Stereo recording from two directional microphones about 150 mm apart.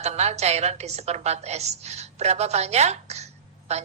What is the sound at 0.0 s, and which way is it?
A woman's voice, 45° right (ahead or behind).